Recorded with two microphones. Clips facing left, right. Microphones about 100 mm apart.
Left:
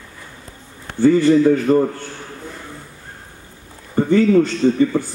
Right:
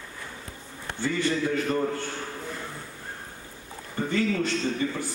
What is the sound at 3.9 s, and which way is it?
Speech, 40° left (ahead or behind).